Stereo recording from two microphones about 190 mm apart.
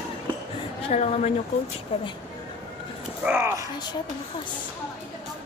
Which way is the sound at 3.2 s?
10° right (ahead or behind).